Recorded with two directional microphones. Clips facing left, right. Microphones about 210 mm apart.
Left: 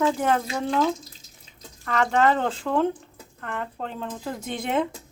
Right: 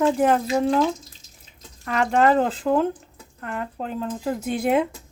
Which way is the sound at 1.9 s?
5° right (ahead or behind).